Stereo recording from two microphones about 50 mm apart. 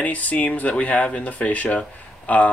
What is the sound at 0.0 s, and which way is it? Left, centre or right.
Speech, left.